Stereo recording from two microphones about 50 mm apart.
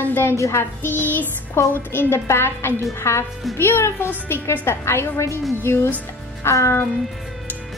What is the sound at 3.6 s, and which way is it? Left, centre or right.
A woman's voice, left.